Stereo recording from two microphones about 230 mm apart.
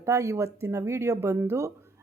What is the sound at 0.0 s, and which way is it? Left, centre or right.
Speech, centre.